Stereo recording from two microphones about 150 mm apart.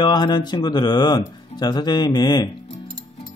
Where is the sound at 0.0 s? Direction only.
30° left (ahead or behind).